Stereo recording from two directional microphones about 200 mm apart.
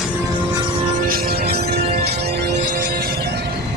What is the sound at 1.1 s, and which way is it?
Music, 50° right (ahead or behind).